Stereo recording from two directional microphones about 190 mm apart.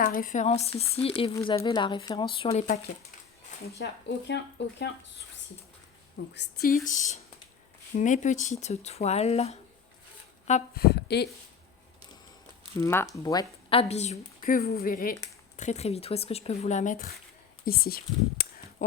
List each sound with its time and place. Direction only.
0.0 s a woman's voice: 45° left (ahead or behind); by 2.6 s 30° left (ahead or behind)
3.8 s speech: 65° left (ahead or behind)
6.3 s a woman's voice: 60° left (ahead or behind); by 9.6 s 35° left (ahead or behind)
10.8 s speech: 60° left (ahead or behind)
12.8 s speech: 10° left (ahead or behind)
13.2 s a woman's voice: 25° left (ahead or behind); by 17.1 s 40° left (ahead or behind)
17.7 s speech: 50° left (ahead or behind)